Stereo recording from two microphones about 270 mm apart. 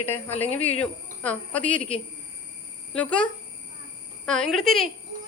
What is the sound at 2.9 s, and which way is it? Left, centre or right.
A woman's voice, centre.